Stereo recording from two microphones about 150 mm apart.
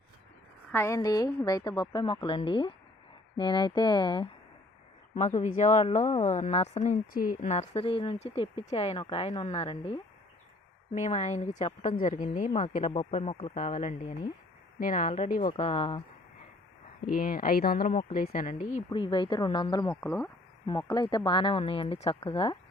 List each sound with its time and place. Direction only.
0.7 s a woman's voice: 15° left (ahead or behind)
5.1 s a woman's voice: 50° left (ahead or behind)
7.1 s a woman's voice: 70° left (ahead or behind); by 9.5 s 35° left (ahead or behind)
9.5 s a woman's voice: 45° left (ahead or behind)
12.9 s a woman's voice: 35° left (ahead or behind)
13.6 s a woman's voice: 50° left (ahead or behind)
15.3 s a woman's voice: 65° left (ahead or behind)
15.5 s a woman's voice: 40° left (ahead or behind)
17.1 s speech: 70° left (ahead or behind); by 17.8 s 85° left
17.8 s a woman's voice: 65° left (ahead or behind)
18.9 s a woman's voice: 35° left (ahead or behind)
20.0 s speech: 10° left (ahead or behind)
20.7 s a woman's voice: 30° left (ahead or behind)